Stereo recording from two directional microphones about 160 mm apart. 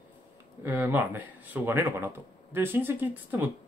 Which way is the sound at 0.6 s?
15° right (ahead or behind).